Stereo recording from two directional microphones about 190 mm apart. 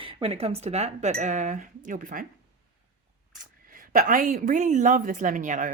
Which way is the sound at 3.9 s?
45° right (ahead or behind).